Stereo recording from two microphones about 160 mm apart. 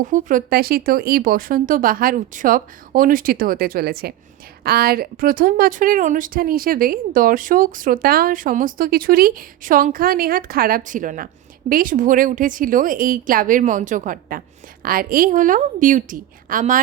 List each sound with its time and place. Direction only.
0.0 s speech: 55° right (ahead or behind)